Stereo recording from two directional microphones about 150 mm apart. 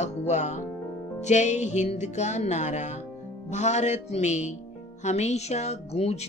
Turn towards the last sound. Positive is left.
turn(degrees=45)  # may be behind; listen again after turning